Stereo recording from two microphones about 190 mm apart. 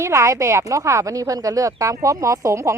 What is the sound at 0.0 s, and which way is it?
Speech, 15° right (ahead or behind).